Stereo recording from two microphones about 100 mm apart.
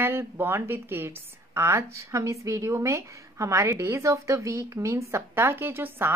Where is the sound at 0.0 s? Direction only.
25° right (ahead or behind).